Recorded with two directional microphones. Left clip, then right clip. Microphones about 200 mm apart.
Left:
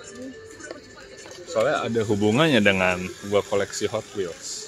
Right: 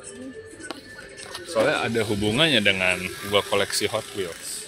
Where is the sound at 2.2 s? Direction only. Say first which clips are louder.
Left 1 dB; 30° left (ahead or behind).